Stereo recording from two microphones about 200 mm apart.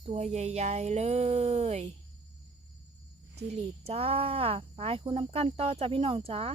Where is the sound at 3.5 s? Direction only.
30° right (ahead or behind).